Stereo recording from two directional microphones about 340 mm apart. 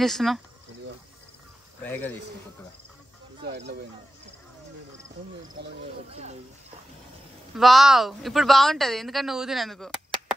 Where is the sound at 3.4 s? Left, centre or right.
Right.